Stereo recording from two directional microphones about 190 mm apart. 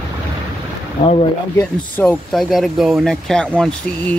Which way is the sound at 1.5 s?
10° left (ahead or behind).